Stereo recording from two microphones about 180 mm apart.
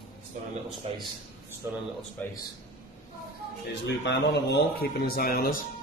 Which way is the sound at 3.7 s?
75° left (ahead or behind).